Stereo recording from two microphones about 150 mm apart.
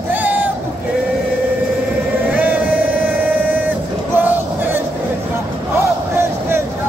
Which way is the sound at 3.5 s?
10° right (ahead or behind).